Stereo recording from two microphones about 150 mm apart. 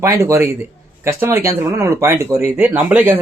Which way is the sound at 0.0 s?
20° right (ahead or behind).